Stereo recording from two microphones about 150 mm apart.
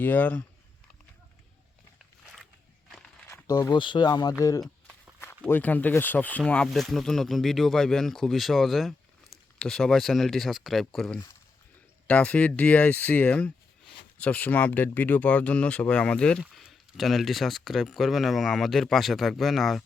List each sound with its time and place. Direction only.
0.0 s speech: 10° left (ahead or behind)
3.2 s speech: 20° left (ahead or behind)
5.5 s speech: 10° left (ahead or behind)